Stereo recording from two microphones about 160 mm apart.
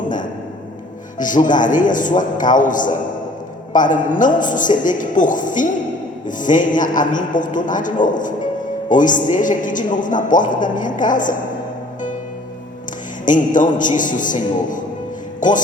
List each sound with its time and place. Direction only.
1.2 s a woman's voice: 55° left (ahead or behind)
13.2 s a woman's voice: 55° left (ahead or behind)